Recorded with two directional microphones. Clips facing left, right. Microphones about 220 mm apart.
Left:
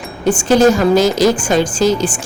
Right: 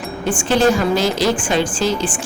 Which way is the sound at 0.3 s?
40° left (ahead or behind).